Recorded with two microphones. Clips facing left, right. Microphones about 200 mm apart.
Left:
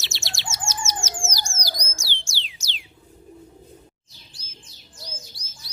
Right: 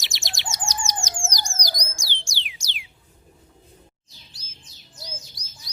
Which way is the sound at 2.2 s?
15° right (ahead or behind).